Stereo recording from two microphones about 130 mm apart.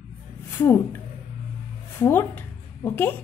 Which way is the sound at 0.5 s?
15° left (ahead or behind).